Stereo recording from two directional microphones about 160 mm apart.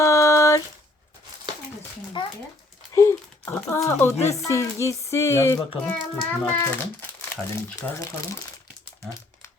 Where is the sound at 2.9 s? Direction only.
20° left (ahead or behind).